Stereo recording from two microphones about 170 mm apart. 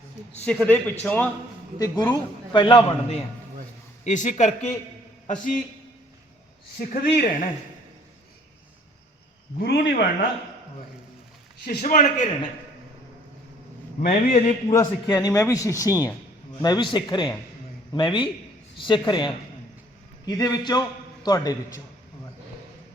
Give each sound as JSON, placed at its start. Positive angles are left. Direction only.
{"t": 0.4, "sound": "a man's voice", "side_deg": 10}
{"t": 1.8, "sound": "speech", "side_deg": 25}
{"t": 4.0, "sound": "a man's voice", "side_deg": 45}
{"t": 6.7, "sound": "speech", "side_deg": 60}
{"t": 9.6, "sound": "a man's voice", "side_deg": 85}
{"t": 11.6, "sound": "a man's voice", "side_deg": 55}
{"t": 14.1, "sound": "a man's voice", "side_deg": 45}
{"t": 14.7, "sound": "speech", "side_deg": 15}